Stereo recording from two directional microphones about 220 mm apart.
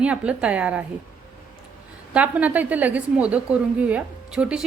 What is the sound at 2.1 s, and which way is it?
A woman's voice, 5° right (ahead or behind).